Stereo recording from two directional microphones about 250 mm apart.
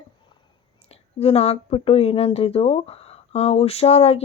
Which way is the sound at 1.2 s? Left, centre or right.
Left.